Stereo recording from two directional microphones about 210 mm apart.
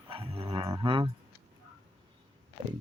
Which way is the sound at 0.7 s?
25° right (ahead or behind).